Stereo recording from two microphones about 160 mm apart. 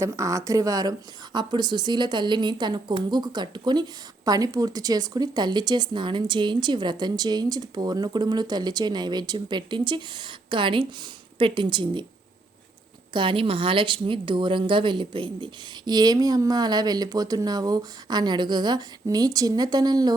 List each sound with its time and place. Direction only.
0.0 s a woman's voice: 20° right (ahead or behind)
13.1 s speech: 30° right (ahead or behind)